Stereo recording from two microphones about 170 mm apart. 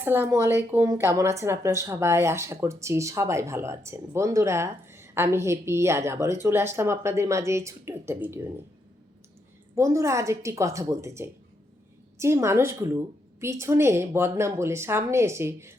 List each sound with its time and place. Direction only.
0.0 s speech: 10° right (ahead or behind)
9.7 s speech: 20° right (ahead or behind)